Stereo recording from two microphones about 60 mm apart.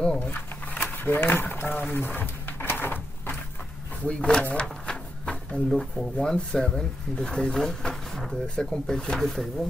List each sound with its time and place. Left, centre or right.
0.2 s a sound: left
4.0 s drawer open or close: centre
5.7 s speech: centre
6.1 s speech: centre